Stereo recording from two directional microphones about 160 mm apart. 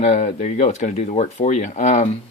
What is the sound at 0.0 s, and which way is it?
Speech, 45° left (ahead or behind).